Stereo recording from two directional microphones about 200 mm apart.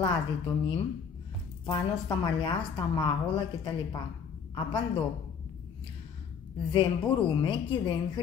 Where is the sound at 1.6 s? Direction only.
20° left (ahead or behind).